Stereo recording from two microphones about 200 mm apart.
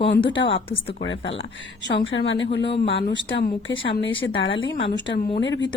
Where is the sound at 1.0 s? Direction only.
65° left (ahead or behind).